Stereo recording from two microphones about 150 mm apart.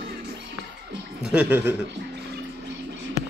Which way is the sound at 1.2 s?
10° right (ahead or behind).